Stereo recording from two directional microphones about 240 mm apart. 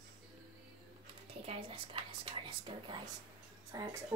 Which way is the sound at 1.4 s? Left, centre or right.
Right.